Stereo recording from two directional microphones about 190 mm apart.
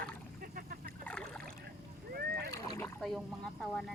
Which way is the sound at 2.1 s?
55° right (ahead or behind).